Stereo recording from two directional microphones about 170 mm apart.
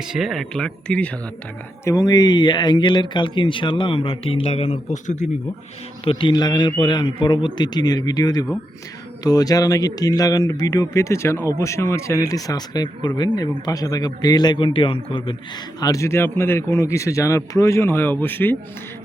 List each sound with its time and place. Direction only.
0.0 s speech: centre (ahead or behind)
1.8 s speech: 20° left (ahead or behind); by 5.3 s 45° left (ahead or behind)
6.1 s speech: 30° left (ahead or behind)
15.8 s a man's voice: 20° left (ahead or behind)